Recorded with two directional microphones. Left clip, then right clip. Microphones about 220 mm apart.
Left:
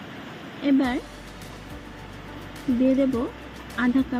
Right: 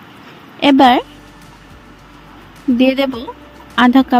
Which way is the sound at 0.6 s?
50° right (ahead or behind).